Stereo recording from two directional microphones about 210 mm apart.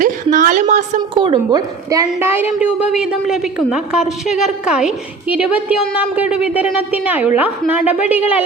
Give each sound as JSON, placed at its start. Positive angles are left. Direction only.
{"t": 0.0, "sound": "a woman's voice", "side_deg": -40}
{"t": 1.2, "sound": "a woman's voice", "side_deg": -20}